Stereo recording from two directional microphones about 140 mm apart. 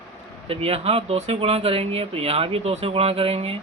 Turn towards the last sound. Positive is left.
turn(degrees=-45)  # may be behind; listen again after turning